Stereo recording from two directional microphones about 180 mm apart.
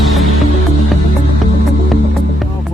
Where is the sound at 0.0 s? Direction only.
Centre (ahead or behind).